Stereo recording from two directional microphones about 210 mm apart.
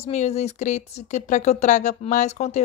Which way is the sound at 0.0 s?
30° left (ahead or behind).